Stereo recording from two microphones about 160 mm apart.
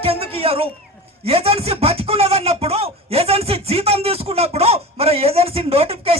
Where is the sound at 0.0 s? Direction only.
35° right (ahead or behind).